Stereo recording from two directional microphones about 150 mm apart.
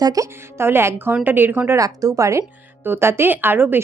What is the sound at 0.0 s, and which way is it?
Speech, 25° right (ahead or behind).